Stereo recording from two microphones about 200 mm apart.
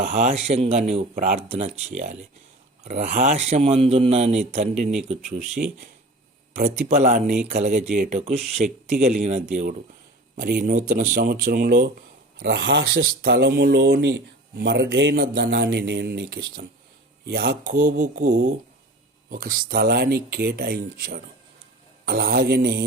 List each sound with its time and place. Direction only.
0.1 s a man's voice: 35° right (ahead or behind)
5.6 s a man's voice: 45° right (ahead or behind)
17.6 s speech: 40° right (ahead or behind)